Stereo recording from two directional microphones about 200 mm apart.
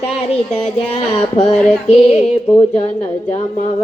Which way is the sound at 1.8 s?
35° left (ahead or behind).